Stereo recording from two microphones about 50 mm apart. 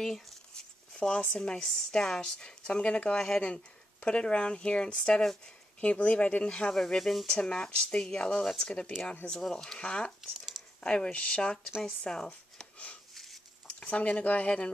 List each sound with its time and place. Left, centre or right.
0.9 s speech: left
5.8 s speech: left
6.7 s speech: centre
7.3 s speech: centre
12.5 s a sound: left
13.1 s a sound: centre
13.7 s speech: left